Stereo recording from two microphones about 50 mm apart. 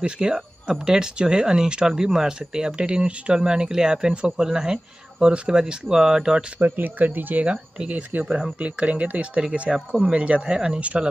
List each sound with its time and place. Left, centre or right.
0.0 s speech: centre
6.6 s speech: right
7.4 s speech: centre
7.9 s speech: right
8.3 s speech: centre
8.5 s speech: right
9.4 s speech: centre